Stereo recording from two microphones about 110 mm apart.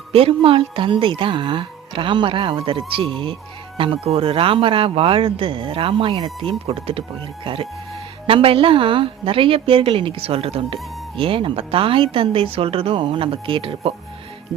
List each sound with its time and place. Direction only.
0.1 s speech: 60° right (ahead or behind)